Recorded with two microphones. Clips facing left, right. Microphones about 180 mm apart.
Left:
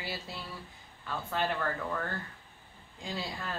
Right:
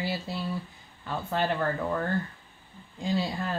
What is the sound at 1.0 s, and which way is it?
Speech, 30° right (ahead or behind).